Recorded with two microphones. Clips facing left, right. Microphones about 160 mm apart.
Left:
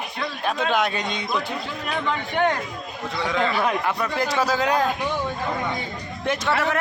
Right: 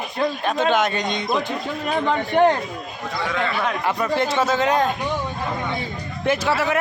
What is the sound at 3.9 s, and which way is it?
Speech, 5° right (ahead or behind).